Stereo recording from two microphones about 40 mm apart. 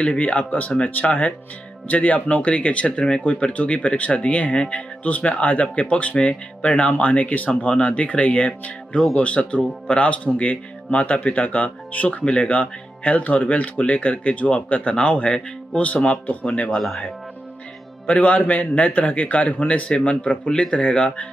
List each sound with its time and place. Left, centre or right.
0.0 s speech: left
7.6 s speech: left
16.7 s speech: centre
18.1 s speech: left
19.9 s speech: left